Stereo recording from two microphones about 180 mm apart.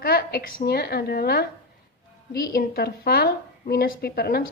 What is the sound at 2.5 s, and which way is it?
A woman's voice, 60° left (ahead or behind).